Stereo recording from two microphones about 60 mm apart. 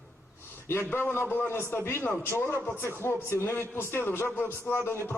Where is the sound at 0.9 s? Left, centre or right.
Left.